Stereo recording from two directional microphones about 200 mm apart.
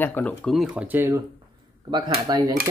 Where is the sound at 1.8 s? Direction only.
25° right (ahead or behind).